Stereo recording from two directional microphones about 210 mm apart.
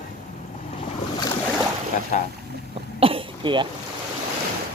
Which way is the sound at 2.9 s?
25° right (ahead or behind).